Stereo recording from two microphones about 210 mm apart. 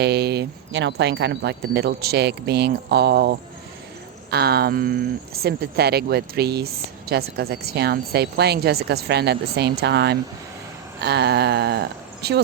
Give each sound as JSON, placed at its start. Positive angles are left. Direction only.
{"t": 0.0, "sound": "speech", "side_deg": -50}